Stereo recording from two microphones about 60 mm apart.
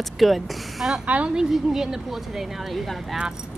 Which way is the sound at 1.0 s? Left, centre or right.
Right.